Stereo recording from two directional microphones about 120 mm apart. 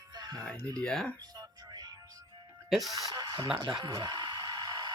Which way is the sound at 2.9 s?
30° right (ahead or behind).